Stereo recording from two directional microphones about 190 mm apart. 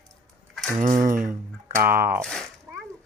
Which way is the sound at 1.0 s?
45° right (ahead or behind).